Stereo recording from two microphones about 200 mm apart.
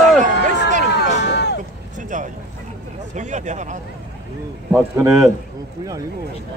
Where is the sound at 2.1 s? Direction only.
40° right (ahead or behind).